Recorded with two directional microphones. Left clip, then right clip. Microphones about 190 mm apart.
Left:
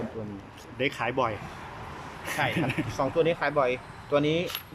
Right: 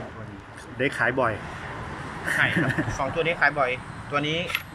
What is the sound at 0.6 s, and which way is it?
Speech, 10° left (ahead or behind).